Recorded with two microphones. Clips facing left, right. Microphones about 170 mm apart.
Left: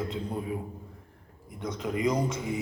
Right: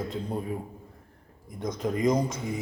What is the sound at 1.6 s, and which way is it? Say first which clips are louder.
Speech: right 2 dB; 40° right (ahead or behind).